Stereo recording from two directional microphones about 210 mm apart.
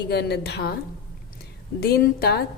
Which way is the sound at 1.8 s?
50° left (ahead or behind).